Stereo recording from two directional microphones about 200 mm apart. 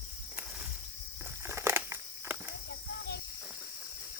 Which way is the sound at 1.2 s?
10° right (ahead or behind).